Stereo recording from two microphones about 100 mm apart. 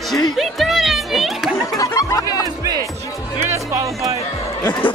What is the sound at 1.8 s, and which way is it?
Music, 35° left (ahead or behind).